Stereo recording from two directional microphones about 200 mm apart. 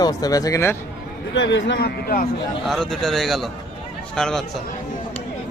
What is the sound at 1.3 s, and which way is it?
Speech, 65° left (ahead or behind).